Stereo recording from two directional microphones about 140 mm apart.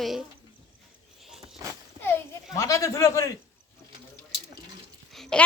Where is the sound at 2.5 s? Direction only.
25° left (ahead or behind).